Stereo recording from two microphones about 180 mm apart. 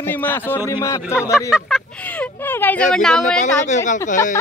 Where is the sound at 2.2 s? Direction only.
10° left (ahead or behind).